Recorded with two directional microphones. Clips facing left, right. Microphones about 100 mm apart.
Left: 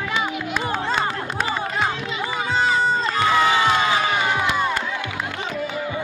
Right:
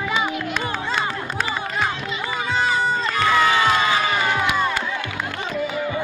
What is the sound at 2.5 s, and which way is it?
Crowd, 30° left (ahead or behind).